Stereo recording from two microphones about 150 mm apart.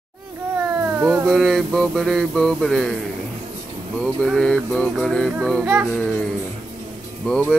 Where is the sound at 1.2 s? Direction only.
Centre (ahead or behind).